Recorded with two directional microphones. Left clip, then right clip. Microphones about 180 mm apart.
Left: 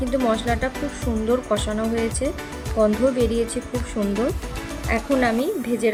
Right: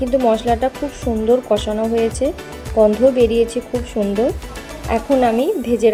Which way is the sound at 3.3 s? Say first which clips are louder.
Right 7 dB; 35° right (ahead or behind).